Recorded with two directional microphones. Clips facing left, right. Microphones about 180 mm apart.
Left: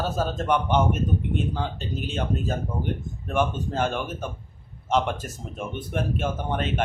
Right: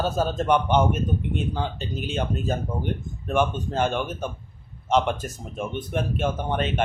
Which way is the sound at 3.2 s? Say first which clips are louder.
Right 2 dB; centre (ahead or behind).